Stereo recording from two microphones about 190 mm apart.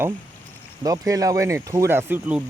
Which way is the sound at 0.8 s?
20° right (ahead or behind).